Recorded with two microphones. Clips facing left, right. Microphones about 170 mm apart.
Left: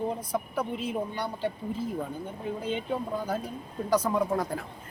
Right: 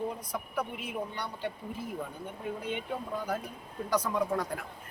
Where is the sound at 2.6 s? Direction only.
30° left (ahead or behind).